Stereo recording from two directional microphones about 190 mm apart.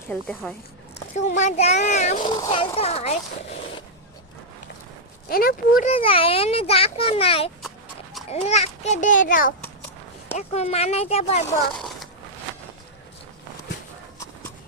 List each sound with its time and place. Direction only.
0.1 s speech: 5° left (ahead or behind)
1.1 s a child's voice: 40° left (ahead or behind)
2.2 s a child's voice: 25° left (ahead or behind)
5.3 s speech: 50° left (ahead or behind)
5.9 s a child's voice: 30° left (ahead or behind); by 9.5 s 45° left (ahead or behind)
10.3 s a child's voice: 35° left (ahead or behind)
11.7 s a sound: centre (ahead or behind)